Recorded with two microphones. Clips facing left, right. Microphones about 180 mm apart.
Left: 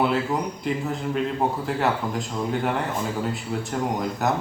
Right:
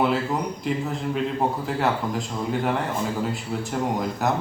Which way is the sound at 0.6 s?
Centre (ahead or behind).